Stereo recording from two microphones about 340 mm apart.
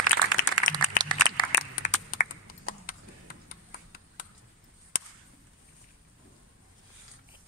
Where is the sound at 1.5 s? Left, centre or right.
Left.